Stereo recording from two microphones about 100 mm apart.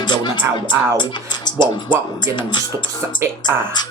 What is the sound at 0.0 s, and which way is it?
Music, 50° left (ahead or behind).